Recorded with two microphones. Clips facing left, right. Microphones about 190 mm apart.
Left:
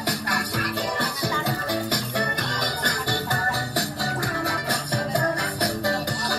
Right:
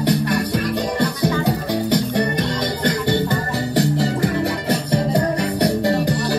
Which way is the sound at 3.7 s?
20° right (ahead or behind).